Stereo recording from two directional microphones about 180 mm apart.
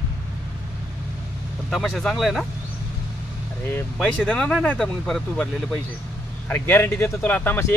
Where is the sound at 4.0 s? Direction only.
5° left (ahead or behind).